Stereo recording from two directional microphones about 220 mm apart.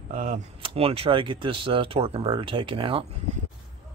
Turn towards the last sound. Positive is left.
turn(degrees=-25)  # may be behind; listen again after turning